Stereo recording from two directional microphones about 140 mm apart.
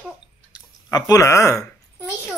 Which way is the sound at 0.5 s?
30° left (ahead or behind).